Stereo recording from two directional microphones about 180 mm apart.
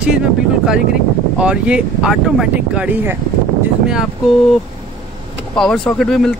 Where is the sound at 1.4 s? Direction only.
5° right (ahead or behind).